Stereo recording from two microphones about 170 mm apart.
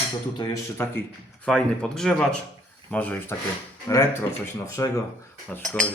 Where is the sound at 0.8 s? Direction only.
15° left (ahead or behind).